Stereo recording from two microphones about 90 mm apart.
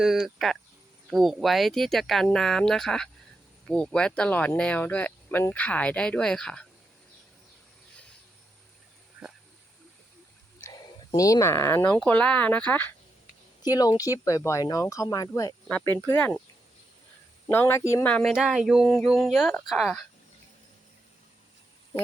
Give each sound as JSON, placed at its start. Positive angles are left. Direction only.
{"t": 0.0, "sound": "speech", "side_deg": -5}
{"t": 9.2, "sound": "wild animals", "side_deg": -5}
{"t": 10.6, "sound": "a sound", "side_deg": 30}
{"t": 11.2, "sound": "speech", "side_deg": 35}
{"t": 12.0, "sound": "speech", "side_deg": 15}
{"t": 13.6, "sound": "speech", "side_deg": 45}
{"t": 16.1, "sound": "speech", "side_deg": 15}
{"t": 17.5, "sound": "speech", "side_deg": 25}
{"t": 18.0, "sound": "speech", "side_deg": 15}
{"t": 18.3, "sound": "speech", "side_deg": -5}